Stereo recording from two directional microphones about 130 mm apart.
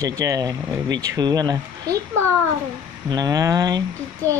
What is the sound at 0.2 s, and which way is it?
Speech, 25° right (ahead or behind).